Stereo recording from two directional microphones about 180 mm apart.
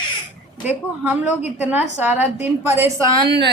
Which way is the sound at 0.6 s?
10° right (ahead or behind).